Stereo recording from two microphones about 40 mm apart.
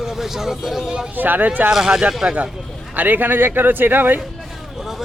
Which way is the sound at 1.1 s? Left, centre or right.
Right.